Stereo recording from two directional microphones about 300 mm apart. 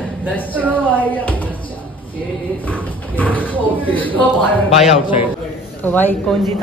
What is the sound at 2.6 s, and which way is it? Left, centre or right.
A man's voice, centre.